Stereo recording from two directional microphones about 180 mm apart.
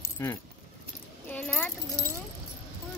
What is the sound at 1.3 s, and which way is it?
Keys jangling, 10° left (ahead or behind).